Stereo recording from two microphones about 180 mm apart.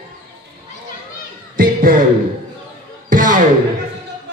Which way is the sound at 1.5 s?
50° right (ahead or behind).